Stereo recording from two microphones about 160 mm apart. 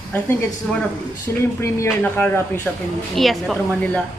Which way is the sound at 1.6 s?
15° left (ahead or behind).